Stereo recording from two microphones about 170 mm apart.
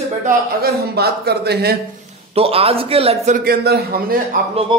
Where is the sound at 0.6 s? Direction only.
65° right (ahead or behind).